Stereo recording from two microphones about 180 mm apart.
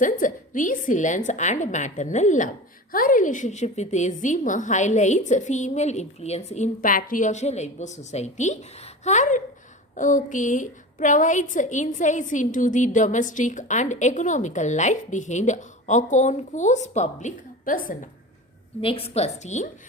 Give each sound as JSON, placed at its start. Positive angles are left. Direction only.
{"t": 0.0, "sound": "a woman's voice", "side_deg": 45}
{"t": 18.8, "sound": "a woman's voice", "side_deg": 30}